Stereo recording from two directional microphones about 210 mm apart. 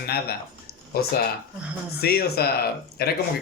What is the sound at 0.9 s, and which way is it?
Speech, 45° left (ahead or behind).